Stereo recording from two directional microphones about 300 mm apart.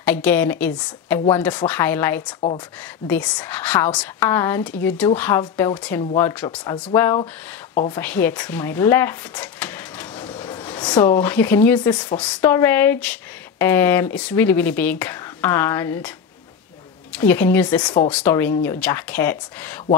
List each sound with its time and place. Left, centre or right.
0.0 s speech: centre
8.0 s speech: centre
17.1 s speech: centre